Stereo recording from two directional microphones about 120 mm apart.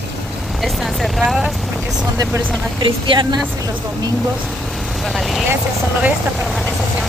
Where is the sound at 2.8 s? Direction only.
45° right (ahead or behind).